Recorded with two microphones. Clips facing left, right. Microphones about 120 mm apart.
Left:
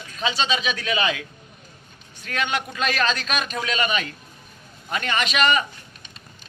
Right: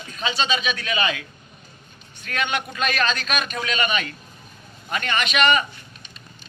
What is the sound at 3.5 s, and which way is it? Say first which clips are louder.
Speech: left 1 dB; 20° left (ahead or behind).